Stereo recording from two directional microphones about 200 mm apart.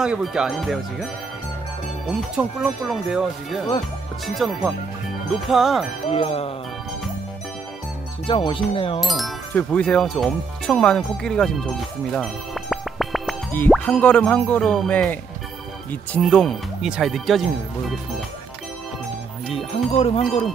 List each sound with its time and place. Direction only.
0.0 s speech: 5° right (ahead or behind)
2.0 s speech: centre (ahead or behind)
6.0 s speech: 30° left (ahead or behind)
8.3 s speech: 25° left (ahead or behind)
9.0 s speech: centre (ahead or behind)
12.1 s music: centre (ahead or behind)
13.5 s speech: 10° left (ahead or behind)
20.0 s speech: 30° left (ahead or behind)